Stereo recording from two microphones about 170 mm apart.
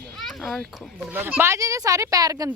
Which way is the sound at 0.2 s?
Centre (ahead or behind).